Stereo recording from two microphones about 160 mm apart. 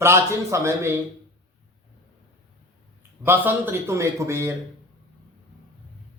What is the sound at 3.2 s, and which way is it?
A man's voice, 10° right (ahead or behind).